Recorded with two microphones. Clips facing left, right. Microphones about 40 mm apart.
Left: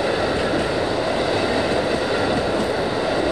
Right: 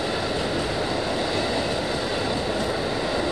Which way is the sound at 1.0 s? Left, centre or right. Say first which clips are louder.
Left 5 dB; left.